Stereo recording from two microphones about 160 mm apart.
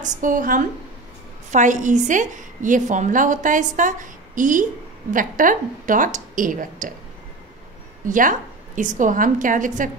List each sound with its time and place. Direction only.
0.0 s a woman's voice: 55° right (ahead or behind)
8.0 s a woman's voice: 55° right (ahead or behind)